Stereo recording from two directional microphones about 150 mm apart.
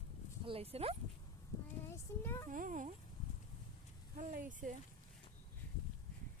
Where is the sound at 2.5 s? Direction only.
60° right (ahead or behind).